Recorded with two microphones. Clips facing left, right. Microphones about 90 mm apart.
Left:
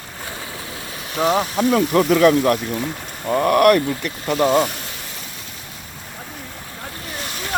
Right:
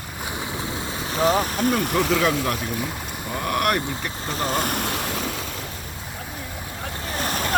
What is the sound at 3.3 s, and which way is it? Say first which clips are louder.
Speech: left 10 dB; 50° left (ahead or behind).